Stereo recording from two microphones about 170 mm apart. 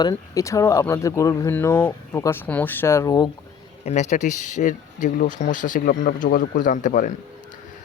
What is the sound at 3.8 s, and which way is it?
Speech, 45° left (ahead or behind).